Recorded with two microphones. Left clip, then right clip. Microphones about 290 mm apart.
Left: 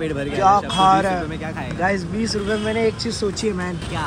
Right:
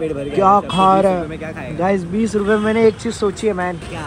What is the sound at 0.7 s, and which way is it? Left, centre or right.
Speech, right.